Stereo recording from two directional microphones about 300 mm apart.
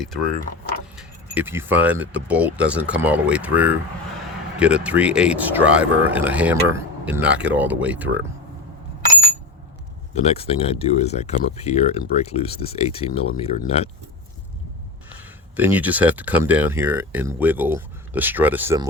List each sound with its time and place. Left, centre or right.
0.9 s speech: centre
10.2 s speech: centre
15.5 s speech: centre